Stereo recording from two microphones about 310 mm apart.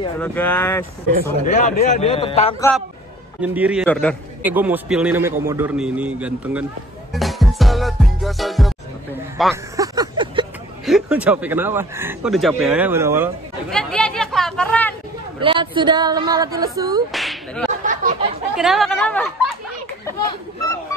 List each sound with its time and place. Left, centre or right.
0.2 s a man's voice: centre
1.4 s a man's voice: left
3.3 s a man's voice: centre
7.2 s music: centre
9.4 s a man's voice: centre
9.8 s a sound: centre
10.9 s speech: centre
15.4 s a woman's voice: centre
17.1 s speech: centre
17.8 s a sound: right
18.6 s a man's voice: centre